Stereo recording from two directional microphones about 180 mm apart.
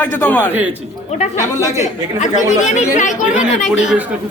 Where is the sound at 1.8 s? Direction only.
45° left (ahead or behind).